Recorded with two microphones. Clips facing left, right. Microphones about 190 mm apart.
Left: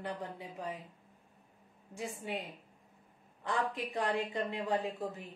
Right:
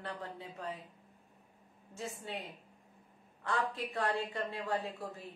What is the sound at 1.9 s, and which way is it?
A man's voice, 15° left (ahead or behind).